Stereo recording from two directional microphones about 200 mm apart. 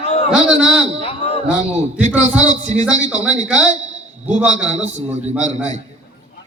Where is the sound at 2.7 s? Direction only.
35° right (ahead or behind).